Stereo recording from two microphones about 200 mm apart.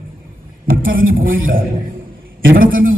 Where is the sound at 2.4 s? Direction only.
45° right (ahead or behind).